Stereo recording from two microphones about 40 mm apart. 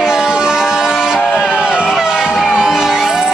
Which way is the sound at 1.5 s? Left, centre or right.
Right.